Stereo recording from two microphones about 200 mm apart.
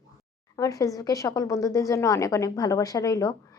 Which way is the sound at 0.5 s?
15° left (ahead or behind).